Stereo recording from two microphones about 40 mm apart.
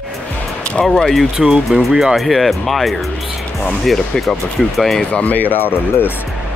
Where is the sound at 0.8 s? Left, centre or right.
Centre.